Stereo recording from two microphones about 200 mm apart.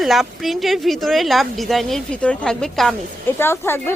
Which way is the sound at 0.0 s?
Centre (ahead or behind).